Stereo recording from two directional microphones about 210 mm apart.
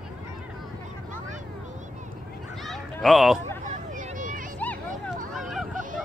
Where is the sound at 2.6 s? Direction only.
Centre (ahead or behind).